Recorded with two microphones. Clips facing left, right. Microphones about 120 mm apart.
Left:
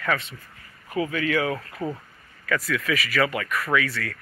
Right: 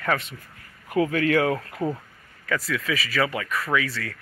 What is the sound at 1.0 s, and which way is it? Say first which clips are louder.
Speech: right 3 dB; 50° right (ahead or behind).